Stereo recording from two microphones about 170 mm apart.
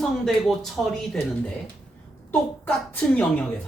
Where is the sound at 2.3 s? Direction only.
10° left (ahead or behind).